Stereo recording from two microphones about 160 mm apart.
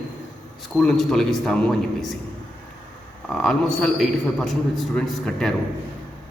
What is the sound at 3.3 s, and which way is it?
A man's voice, 5° left (ahead or behind).